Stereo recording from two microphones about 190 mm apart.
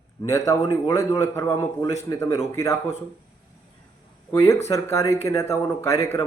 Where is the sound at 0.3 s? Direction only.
15° left (ahead or behind).